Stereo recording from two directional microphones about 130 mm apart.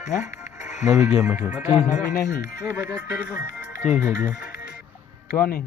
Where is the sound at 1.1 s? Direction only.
10° right (ahead or behind).